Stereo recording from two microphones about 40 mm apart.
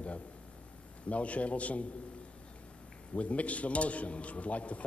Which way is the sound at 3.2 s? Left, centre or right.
Left.